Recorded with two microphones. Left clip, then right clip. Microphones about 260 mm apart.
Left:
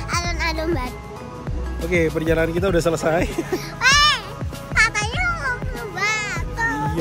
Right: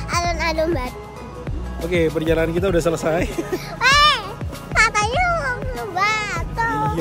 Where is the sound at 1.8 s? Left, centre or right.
Centre.